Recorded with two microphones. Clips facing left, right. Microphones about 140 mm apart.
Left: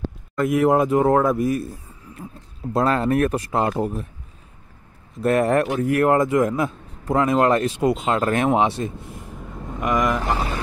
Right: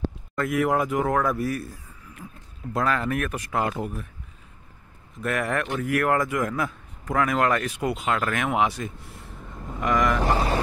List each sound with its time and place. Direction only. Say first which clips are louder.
0.4 s speech: left 6 dB; 25° left (ahead or behind)
5.2 s speech: left 8 dB; 30° left (ahead or behind)
10.2 s mantra: right 1 dB; 35° right (ahead or behind)